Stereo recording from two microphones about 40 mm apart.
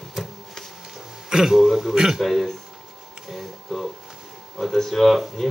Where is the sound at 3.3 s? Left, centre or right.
Centre.